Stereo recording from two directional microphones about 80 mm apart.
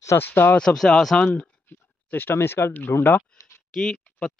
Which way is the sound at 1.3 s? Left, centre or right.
Left.